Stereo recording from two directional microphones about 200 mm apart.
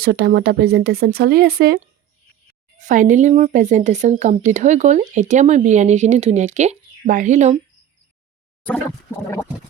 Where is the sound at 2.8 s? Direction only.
40° right (ahead or behind).